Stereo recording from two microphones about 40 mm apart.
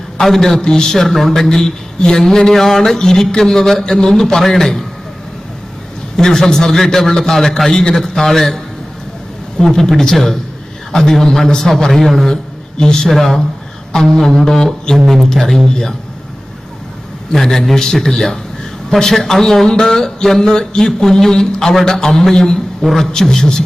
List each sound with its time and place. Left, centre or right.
0.2 s a man's voice: centre
6.1 s a man's voice: centre
12.3 s a sound: centre
13.1 s a man's voice: centre
17.3 s a man's voice: centre
22.8 s a man's voice: centre
23.2 s a man's voice: centre